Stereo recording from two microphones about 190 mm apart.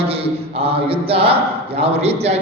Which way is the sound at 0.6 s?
30° right (ahead or behind).